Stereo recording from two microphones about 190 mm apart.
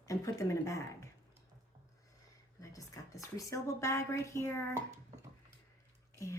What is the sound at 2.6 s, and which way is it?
A woman's voice, 15° left (ahead or behind).